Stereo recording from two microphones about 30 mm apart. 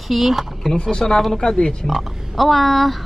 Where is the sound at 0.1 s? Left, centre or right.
Centre.